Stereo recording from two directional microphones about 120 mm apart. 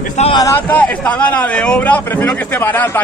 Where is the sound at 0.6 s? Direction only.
15° left (ahead or behind).